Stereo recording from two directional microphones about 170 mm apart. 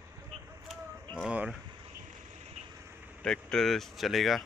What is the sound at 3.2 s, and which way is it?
Speech, 5° left (ahead or behind).